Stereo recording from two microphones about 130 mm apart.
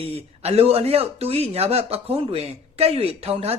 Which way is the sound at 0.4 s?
50° right (ahead or behind).